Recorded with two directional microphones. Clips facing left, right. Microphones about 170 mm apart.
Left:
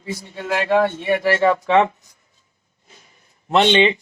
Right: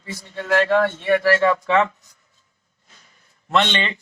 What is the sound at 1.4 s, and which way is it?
Speech, 25° left (ahead or behind).